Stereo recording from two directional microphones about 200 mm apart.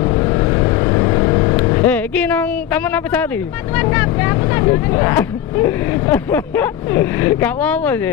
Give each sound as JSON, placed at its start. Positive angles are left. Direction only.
{"t": 0.0, "sound": "vehicle", "side_deg": 25}
{"t": 1.9, "sound": "a woman's voice", "side_deg": 5}